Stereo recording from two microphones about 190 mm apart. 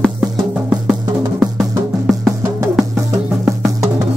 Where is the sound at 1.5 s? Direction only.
Centre (ahead or behind).